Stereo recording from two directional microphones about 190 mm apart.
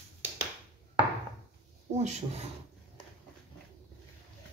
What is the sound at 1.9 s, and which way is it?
Speech, 35° right (ahead or behind).